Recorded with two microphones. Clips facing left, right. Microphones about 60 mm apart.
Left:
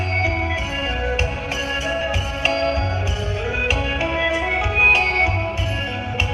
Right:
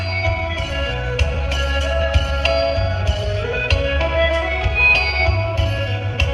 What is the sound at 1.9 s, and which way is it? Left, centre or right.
Music, centre.